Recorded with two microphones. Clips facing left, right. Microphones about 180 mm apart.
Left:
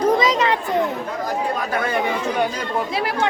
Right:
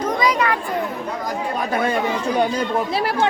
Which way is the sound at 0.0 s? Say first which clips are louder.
Left 2 dB; 25° left (ahead or behind).